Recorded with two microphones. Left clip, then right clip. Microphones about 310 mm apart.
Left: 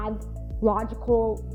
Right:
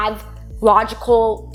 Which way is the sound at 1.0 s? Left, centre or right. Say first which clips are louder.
Right 9 dB; right.